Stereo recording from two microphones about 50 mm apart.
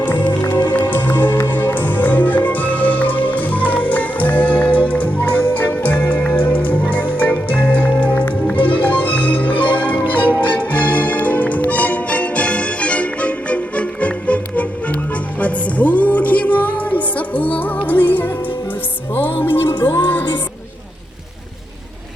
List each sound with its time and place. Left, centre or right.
0.0 s music: left